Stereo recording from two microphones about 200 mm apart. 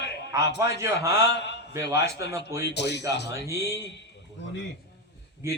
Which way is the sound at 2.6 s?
55° left (ahead or behind).